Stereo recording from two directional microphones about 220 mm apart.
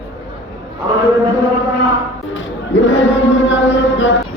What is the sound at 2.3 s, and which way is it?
Chant, 55° left (ahead or behind).